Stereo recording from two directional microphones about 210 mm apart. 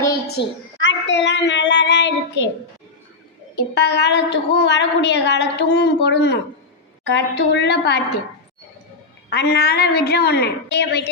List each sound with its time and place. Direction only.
0.3 s a woman's voice: 55° left (ahead or behind)
3.5 s a woman's voice: 55° left (ahead or behind)
9.3 s a woman's voice: 50° left (ahead or behind)